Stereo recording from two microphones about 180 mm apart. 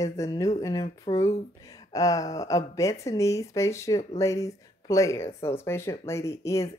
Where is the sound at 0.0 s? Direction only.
20° left (ahead or behind).